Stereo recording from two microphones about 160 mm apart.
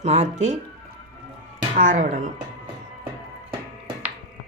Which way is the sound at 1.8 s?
55° right (ahead or behind).